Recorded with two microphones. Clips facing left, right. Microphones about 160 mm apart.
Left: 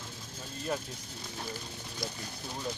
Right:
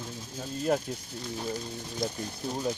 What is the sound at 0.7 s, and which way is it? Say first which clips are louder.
Speech: right 7 dB; 55° right (ahead or behind).